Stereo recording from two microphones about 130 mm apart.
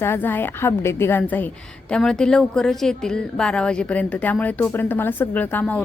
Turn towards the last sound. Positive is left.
turn(degrees=10)  # may be behind; listen again after turning